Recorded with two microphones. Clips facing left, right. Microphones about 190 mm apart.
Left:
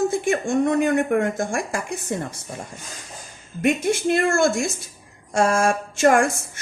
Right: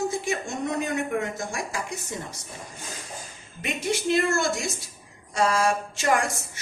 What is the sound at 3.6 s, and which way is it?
A woman's voice, 50° left (ahead or behind).